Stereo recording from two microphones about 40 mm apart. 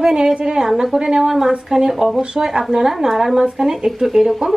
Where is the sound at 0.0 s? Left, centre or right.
Centre.